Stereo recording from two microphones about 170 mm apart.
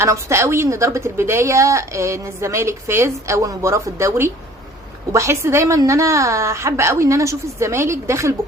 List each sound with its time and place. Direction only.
0.0 s a woman's voice: 15° right (ahead or behind)